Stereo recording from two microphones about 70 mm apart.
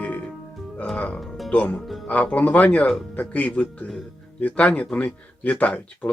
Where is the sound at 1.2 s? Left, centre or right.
Centre.